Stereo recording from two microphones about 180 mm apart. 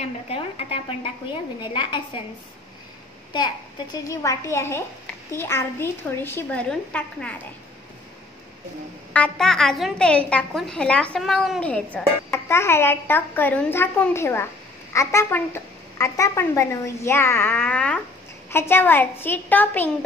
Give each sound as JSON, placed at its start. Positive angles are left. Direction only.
{"t": 0.0, "sound": "a woman's voice", "side_deg": 35}
{"t": 3.3, "sound": "a woman's voice", "side_deg": 25}
{"t": 9.1, "sound": "a woman's voice", "side_deg": 5}